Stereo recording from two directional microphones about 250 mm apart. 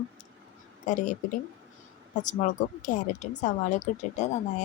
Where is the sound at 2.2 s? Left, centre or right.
Left.